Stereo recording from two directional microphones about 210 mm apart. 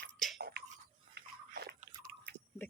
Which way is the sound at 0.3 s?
50° right (ahead or behind).